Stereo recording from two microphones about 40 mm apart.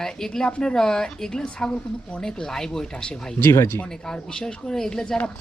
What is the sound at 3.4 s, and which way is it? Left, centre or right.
Speech, left.